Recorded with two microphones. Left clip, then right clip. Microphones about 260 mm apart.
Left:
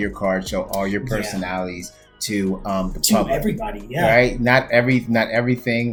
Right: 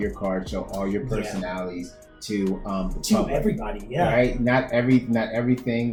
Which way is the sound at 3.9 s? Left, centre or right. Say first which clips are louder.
Left 5 dB; left.